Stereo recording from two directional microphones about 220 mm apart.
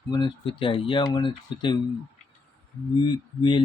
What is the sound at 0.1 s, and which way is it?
Speech, 20° left (ahead or behind).